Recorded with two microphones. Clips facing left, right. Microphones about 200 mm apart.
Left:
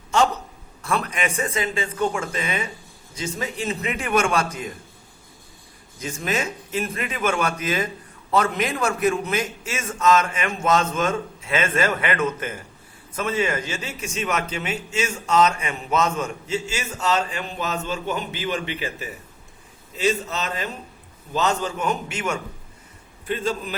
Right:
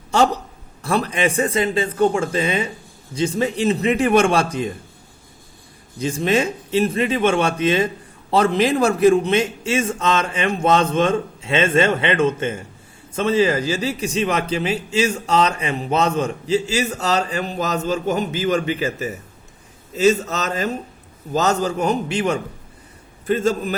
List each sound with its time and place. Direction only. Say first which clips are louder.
0.9 s a man's voice: right 5 dB; 35° right (ahead or behind)
6.0 s a man's voice: right 7 dB; 30° right (ahead or behind)
23.2 s a man's voice: right 7 dB; 45° right (ahead or behind)